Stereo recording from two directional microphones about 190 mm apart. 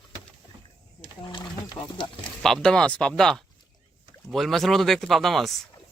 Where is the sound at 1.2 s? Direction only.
25° left (ahead or behind).